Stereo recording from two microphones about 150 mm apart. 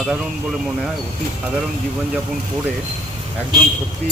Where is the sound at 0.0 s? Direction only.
5° right (ahead or behind).